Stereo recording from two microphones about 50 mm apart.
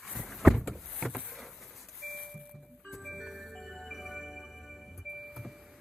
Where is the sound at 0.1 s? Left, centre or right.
Centre.